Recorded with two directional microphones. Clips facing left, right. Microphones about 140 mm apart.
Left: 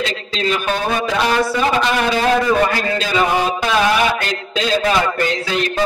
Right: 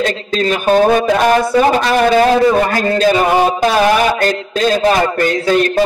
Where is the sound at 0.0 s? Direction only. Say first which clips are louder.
Right 5 dB; 45° right (ahead or behind).